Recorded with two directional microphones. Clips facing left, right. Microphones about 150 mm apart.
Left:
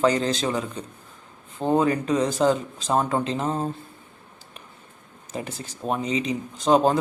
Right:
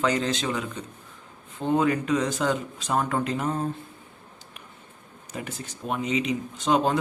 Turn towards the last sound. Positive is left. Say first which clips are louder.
# left 4 dB
turn(degrees=35)  # may be behind; listen again after turning